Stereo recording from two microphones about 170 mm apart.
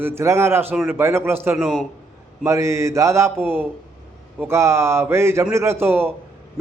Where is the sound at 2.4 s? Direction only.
15° right (ahead or behind).